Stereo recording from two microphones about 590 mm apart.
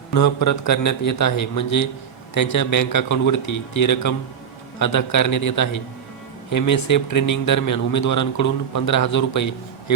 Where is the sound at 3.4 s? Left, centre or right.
Left.